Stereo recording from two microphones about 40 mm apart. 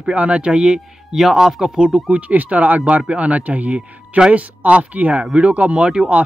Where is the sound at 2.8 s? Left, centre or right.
Right.